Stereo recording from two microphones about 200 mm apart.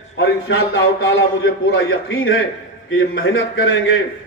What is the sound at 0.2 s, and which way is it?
A man's voice, 65° left (ahead or behind).